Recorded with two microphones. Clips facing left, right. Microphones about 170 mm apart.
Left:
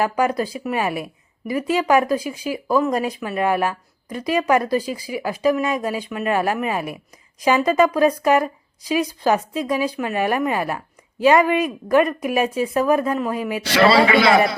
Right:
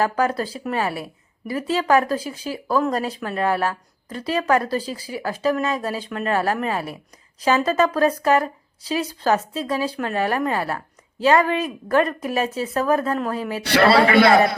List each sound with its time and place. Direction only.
0.0 s speech: 15° left (ahead or behind)
13.7 s a man's voice: 60° right (ahead or behind)